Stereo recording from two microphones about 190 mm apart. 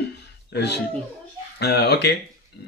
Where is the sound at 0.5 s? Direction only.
60° left (ahead or behind).